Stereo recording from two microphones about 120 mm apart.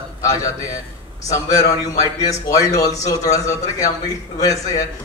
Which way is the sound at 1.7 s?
30° left (ahead or behind).